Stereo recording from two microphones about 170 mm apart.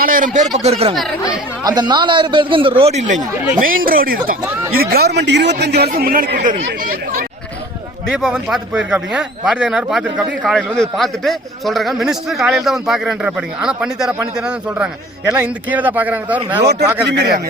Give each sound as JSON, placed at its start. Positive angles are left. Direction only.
{"t": 0.0, "sound": "a man's voice", "side_deg": -55}
{"t": 0.6, "sound": "speech", "side_deg": -35}
{"t": 1.6, "sound": "a man's voice", "side_deg": -25}
{"t": 3.6, "sound": "a man's voice", "side_deg": -55}
{"t": 8.2, "sound": "a man's voice", "side_deg": 0}
{"t": 17.1, "sound": "a man's voice", "side_deg": -75}